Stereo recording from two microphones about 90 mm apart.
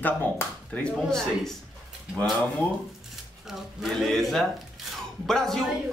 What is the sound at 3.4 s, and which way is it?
Speech, 5° right (ahead or behind).